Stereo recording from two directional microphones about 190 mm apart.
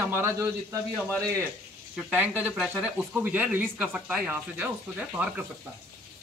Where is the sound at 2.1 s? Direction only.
10° right (ahead or behind).